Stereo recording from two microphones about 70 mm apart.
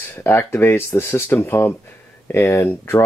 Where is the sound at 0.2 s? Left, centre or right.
Left.